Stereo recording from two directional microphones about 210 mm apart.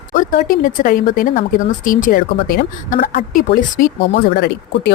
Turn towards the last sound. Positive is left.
turn(degrees=45)  # may be behind; listen again after turning